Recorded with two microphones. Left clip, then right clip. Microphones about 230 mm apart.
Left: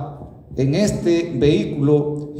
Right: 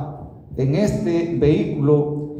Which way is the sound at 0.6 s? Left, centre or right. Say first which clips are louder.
Left 1 dB; left.